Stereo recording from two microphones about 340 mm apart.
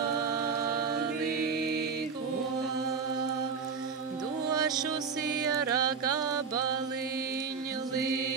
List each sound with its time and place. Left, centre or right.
1.4 s music: right
4.5 s music: centre